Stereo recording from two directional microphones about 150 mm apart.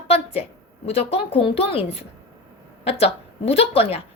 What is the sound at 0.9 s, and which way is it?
A woman's voice, 40° left (ahead or behind).